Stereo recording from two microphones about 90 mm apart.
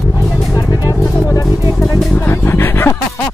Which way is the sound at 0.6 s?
45° left (ahead or behind).